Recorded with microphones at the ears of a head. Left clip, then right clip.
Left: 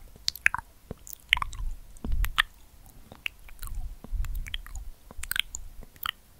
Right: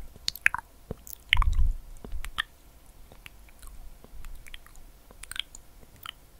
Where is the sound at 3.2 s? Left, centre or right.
Left.